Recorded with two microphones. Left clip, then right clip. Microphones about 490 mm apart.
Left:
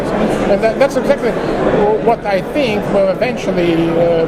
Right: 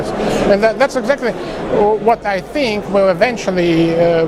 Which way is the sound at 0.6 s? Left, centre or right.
Right.